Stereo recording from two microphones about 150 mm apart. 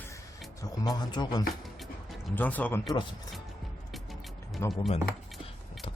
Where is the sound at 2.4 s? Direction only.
10° left (ahead or behind).